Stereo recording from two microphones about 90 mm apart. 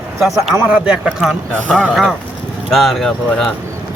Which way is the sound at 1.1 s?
Centre (ahead or behind).